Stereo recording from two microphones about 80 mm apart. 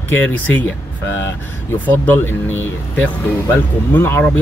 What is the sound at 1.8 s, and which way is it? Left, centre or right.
Speech, left.